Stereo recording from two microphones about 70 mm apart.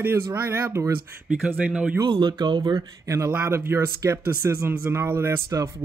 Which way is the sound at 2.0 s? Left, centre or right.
Right.